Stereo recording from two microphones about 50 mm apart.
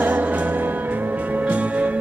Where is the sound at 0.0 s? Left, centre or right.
Right.